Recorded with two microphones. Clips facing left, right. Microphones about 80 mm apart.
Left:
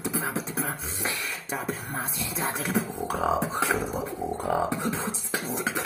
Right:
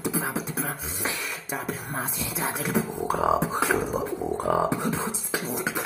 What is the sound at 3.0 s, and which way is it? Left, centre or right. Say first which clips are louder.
Music: right 3 dB; centre.